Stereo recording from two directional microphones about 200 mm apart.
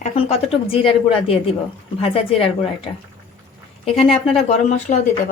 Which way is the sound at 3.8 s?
30° left (ahead or behind).